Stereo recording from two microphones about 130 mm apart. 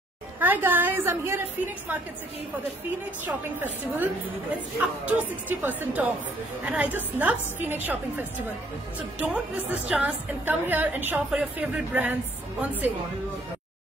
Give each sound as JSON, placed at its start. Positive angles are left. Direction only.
{"t": 0.4, "sound": "a woman's voice", "side_deg": -15}
{"t": 3.3, "sound": "a woman's voice", "side_deg": -10}